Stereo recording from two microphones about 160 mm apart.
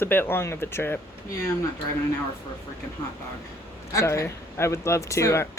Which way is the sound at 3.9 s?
15° left (ahead or behind).